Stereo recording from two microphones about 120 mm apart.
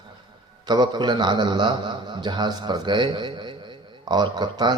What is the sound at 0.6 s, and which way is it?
A man's voice, 35° right (ahead or behind).